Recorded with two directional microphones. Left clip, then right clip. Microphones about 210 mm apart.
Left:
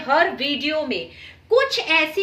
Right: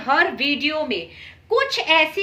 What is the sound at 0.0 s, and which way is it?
A woman's voice, 50° right (ahead or behind).